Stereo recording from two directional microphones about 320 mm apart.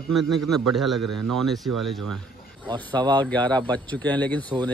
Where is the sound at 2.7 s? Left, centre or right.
Centre.